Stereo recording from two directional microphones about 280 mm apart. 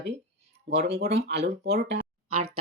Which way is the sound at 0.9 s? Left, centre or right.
Right.